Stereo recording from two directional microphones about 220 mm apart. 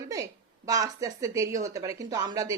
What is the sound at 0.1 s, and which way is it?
Speech, 15° right (ahead or behind).